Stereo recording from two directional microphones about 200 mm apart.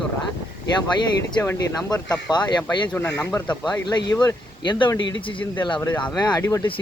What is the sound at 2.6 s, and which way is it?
Speech, 10° left (ahead or behind).